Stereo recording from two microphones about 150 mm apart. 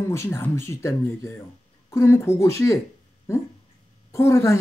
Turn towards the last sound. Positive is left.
turn(degrees=20)  # may be behind; listen again after turning